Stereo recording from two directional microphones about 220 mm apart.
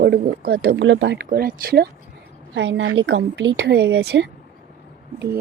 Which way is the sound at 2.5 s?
55° right (ahead or behind).